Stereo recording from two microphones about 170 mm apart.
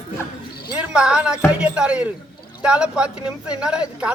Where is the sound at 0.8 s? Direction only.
5° right (ahead or behind).